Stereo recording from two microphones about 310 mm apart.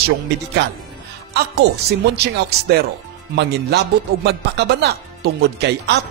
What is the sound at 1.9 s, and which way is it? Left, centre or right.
Speech, right.